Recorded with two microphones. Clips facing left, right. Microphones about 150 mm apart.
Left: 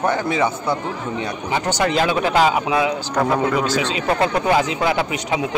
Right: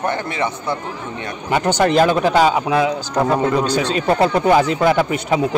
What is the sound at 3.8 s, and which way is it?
Speech, 40° right (ahead or behind).